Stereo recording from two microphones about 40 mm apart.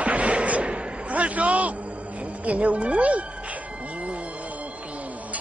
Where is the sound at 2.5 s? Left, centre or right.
Right.